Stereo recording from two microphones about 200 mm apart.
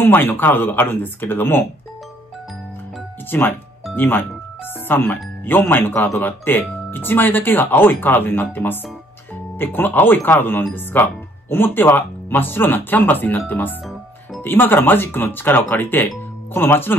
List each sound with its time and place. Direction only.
0.0 s speech: 10° left (ahead or behind)
3.3 s speech: 10° left (ahead or behind)